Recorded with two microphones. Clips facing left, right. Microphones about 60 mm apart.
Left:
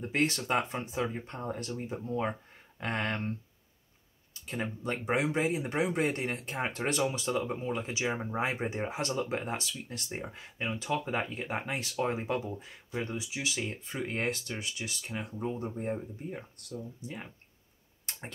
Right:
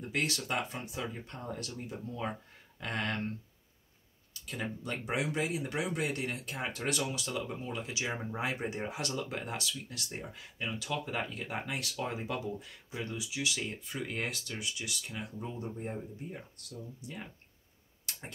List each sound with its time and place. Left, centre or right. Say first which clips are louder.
0.0 s speech: left 4 dB; left
4.3 s speech: left 3 dB; left
15.8 s speech: left 4 dB; centre
16.7 s speech: left 4 dB; centre
18.1 s tick-tock: left 1 dB; left